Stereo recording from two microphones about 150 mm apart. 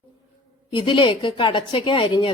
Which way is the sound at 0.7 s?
30° left (ahead or behind).